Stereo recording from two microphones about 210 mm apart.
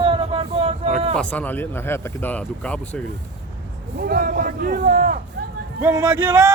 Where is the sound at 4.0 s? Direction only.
45° right (ahead or behind).